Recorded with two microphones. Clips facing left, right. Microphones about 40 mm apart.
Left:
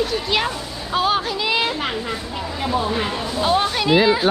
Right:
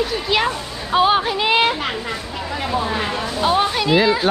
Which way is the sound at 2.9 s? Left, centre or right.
Centre.